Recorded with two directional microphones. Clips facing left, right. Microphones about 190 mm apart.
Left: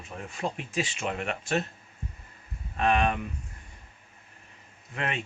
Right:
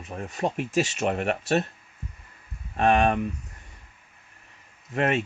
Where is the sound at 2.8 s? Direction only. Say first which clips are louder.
Right 4 dB; 40° right (ahead or behind).